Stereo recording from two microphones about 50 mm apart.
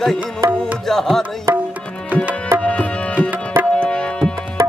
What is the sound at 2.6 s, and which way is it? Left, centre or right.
Tabla, left.